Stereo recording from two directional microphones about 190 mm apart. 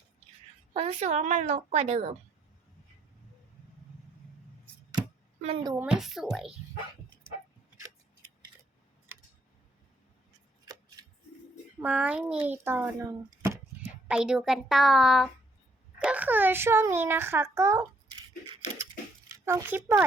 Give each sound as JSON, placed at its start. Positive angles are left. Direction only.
{"t": 0.7, "sound": "a woman's voice", "side_deg": -35}
{"t": 4.9, "sound": "a sound", "side_deg": -25}
{"t": 5.7, "sound": "speech", "side_deg": -5}
{"t": 10.7, "sound": "scissors", "side_deg": -20}
{"t": 11.8, "sound": "a child's voice", "side_deg": -5}
{"t": 19.5, "sound": "speech", "side_deg": -10}